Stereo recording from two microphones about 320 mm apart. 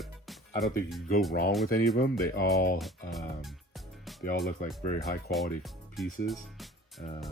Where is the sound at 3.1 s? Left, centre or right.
Centre.